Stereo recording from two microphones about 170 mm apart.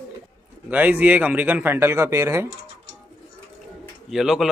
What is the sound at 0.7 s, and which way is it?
Speech, 10° right (ahead or behind).